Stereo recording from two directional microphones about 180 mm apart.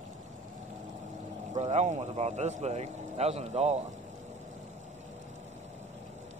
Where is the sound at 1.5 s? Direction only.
40° right (ahead or behind).